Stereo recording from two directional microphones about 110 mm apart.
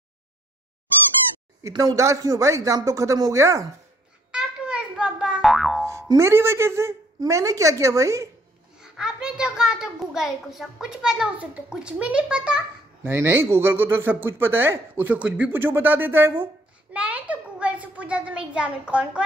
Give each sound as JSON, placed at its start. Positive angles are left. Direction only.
{"t": 1.7, "sound": "speech", "side_deg": -35}
{"t": 4.3, "sound": "boing", "side_deg": -10}
{"t": 5.9, "sound": "music", "side_deg": -25}
{"t": 7.2, "sound": "speech", "side_deg": -30}
{"t": 8.7, "sound": "a child's voice", "side_deg": -5}
{"t": 13.1, "sound": "a child's voice", "side_deg": -20}